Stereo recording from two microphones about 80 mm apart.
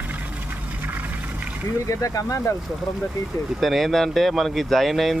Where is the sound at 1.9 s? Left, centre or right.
Left.